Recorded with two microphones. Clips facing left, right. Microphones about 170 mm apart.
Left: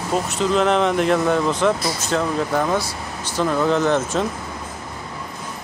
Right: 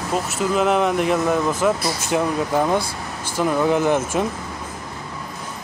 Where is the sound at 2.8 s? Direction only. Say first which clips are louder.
Right 1 dB; 55° right (ahead or behind).